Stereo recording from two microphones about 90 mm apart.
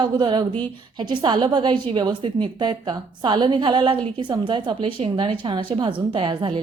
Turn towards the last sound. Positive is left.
turn(degrees=-65)  # may be behind; listen again after turning